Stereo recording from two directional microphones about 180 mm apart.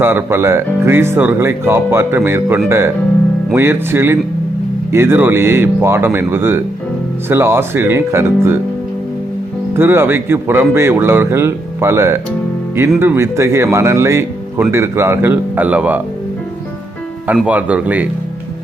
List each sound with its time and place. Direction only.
0.0 s speech: 10° right (ahead or behind)
9.7 s speech: 10° right (ahead or behind)
17.2 s speech: 5° right (ahead or behind)